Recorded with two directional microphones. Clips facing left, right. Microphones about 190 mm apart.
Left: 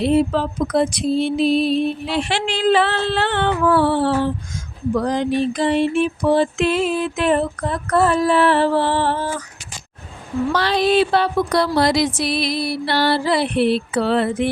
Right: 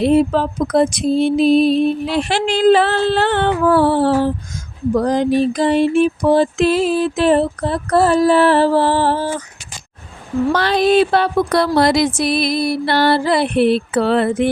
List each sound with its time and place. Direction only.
0.0 s music: 45° right (ahead or behind)
10.5 s music: 50° right (ahead or behind)